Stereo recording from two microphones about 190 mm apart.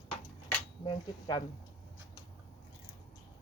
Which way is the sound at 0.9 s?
25° left (ahead or behind).